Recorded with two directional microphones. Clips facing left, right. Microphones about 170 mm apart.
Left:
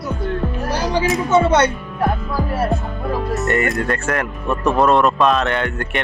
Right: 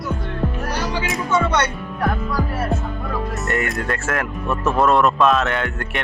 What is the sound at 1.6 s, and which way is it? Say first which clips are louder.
Speech: left 4 dB; 30° left (ahead or behind).